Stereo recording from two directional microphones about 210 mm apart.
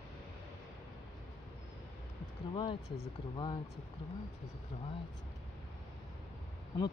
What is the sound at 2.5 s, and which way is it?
Speech, 25° left (ahead or behind).